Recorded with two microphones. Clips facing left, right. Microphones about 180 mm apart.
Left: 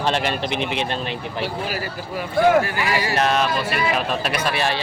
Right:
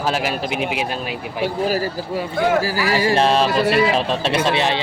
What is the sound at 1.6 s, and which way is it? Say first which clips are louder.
A man's voice: right 7 dB; 40° right (ahead or behind).